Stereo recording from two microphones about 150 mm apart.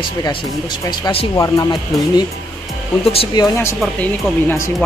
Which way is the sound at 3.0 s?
40° left (ahead or behind).